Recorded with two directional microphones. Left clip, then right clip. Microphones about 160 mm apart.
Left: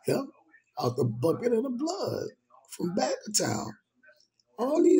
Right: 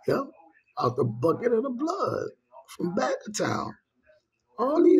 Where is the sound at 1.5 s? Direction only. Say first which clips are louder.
Right 2 dB; 30° right (ahead or behind).